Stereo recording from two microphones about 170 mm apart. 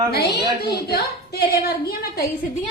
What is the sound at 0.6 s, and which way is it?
A woman's voice, 70° left (ahead or behind).